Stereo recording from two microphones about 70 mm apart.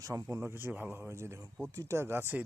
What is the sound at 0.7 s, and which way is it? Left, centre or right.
Speech, right.